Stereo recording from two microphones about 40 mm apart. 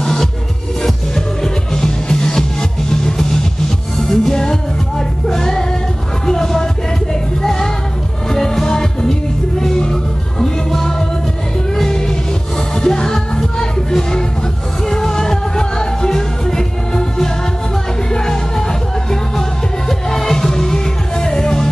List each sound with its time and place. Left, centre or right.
0.0 s music: centre